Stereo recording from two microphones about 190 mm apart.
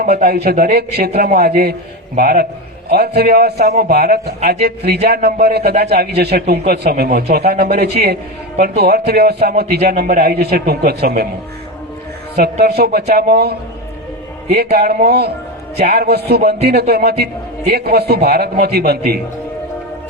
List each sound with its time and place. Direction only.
0.0 s a man's voice: 55° right (ahead or behind)
12.4 s a man's voice: 60° right (ahead or behind)